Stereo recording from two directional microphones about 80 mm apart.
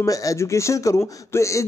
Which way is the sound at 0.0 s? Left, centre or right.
Left.